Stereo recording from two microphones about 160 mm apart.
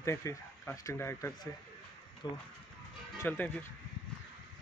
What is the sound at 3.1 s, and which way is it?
Speech, 10° left (ahead or behind).